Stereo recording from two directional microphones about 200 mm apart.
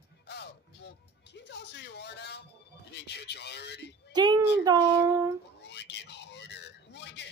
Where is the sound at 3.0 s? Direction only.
55° left (ahead or behind).